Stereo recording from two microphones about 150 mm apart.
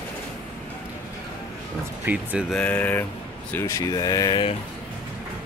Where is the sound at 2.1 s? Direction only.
15° right (ahead or behind).